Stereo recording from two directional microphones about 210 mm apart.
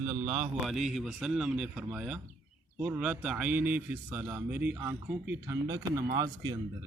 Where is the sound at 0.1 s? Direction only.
10° right (ahead or behind).